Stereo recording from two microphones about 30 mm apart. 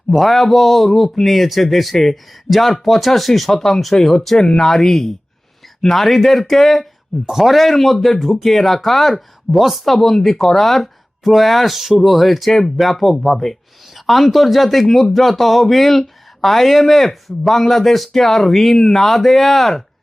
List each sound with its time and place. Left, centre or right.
0.1 s speech: centre
4.4 s speech: left
4.6 s speech: centre
7.9 s speech: centre
12.5 s speech: centre
12.7 s speech: centre